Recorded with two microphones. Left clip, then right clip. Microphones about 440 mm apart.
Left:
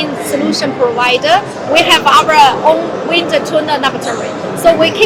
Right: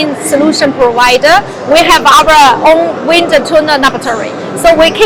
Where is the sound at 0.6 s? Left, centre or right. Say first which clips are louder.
Right 4 dB; right.